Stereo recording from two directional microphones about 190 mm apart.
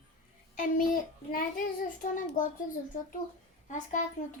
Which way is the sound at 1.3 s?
50° left (ahead or behind).